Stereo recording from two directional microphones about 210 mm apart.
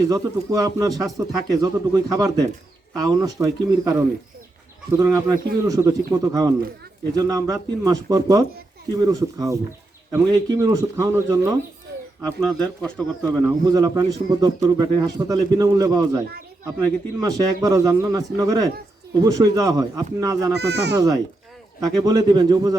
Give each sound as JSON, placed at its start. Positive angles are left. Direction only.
{"t": 0.1, "sound": "a man's voice", "side_deg": -15}
{"t": 12.2, "sound": "speech", "side_deg": 5}
{"t": 13.4, "sound": "a man's voice", "side_deg": -15}
{"t": 17.2, "sound": "a man's voice", "side_deg": -15}
{"t": 20.6, "sound": "speech", "side_deg": -55}
{"t": 20.9, "sound": "a man's voice", "side_deg": -15}